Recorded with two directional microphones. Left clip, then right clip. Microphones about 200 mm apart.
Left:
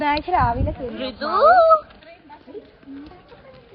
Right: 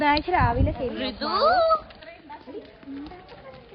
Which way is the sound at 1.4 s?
5° right (ahead or behind).